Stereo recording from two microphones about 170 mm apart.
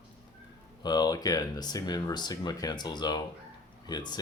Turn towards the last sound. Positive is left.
turn(degrees=25)  # may be behind; listen again after turning